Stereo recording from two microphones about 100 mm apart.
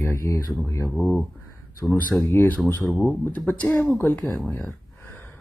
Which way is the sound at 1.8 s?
15° left (ahead or behind).